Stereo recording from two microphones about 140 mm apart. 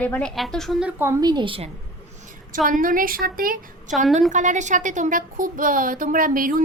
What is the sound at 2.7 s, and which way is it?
Speech, 80° right.